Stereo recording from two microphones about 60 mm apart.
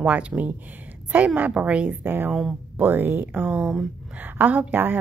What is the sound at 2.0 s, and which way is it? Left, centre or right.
A woman's voice, right.